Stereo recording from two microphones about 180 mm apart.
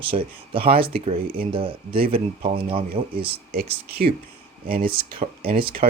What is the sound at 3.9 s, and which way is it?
Speech, 60° right (ahead or behind).